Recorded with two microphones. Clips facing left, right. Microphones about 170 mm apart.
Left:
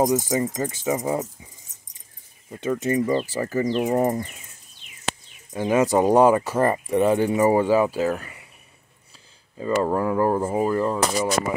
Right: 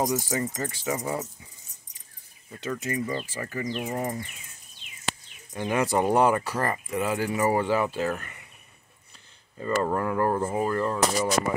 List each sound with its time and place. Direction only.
0.0 s speech: 20° left (ahead or behind)
2.5 s speech: 25° left (ahead or behind); by 4.3 s 40° left (ahead or behind)
5.5 s speech: 20° left (ahead or behind)
9.6 s speech: 15° left (ahead or behind)